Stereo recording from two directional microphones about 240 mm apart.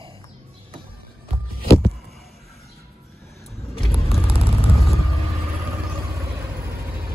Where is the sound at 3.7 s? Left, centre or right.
Centre.